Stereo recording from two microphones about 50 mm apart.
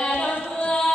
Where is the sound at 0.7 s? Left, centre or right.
Centre.